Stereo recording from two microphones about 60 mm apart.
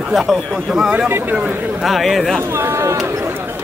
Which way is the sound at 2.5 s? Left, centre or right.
Right.